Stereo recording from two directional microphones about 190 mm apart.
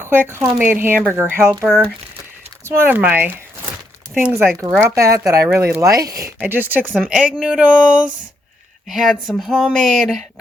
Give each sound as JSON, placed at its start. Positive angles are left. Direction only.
{"t": 0.0, "sound": "speech", "side_deg": -10}
{"t": 2.6, "sound": "speech", "side_deg": -10}
{"t": 4.8, "sound": "speech", "side_deg": -15}
{"t": 6.9, "sound": "speech", "side_deg": 0}